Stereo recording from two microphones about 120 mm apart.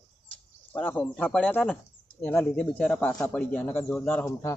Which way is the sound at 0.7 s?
15° left (ahead or behind).